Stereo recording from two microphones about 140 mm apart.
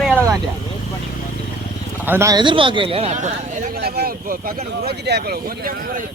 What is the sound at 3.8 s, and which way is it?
A man's voice, 90° right.